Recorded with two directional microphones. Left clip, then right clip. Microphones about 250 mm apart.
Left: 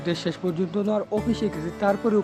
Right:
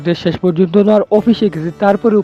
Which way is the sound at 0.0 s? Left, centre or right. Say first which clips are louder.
Right 12 dB; right.